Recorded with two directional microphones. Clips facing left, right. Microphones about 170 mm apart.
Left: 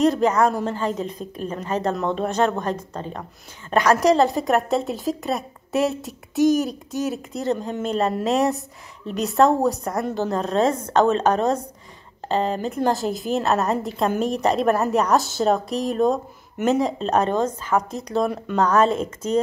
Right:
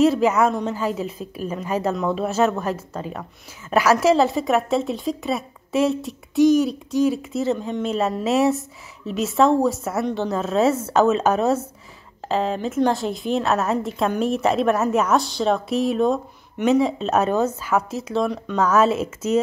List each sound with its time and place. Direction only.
0.0 s a woman's voice: 5° right (ahead or behind)
6.5 s speech: 45° left (ahead or behind)
6.9 s a woman's voice: centre (ahead or behind)